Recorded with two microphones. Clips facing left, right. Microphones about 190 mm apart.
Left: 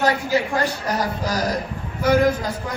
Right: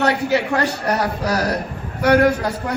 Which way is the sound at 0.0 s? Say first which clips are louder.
Right 2 dB; 70° right (ahead or behind).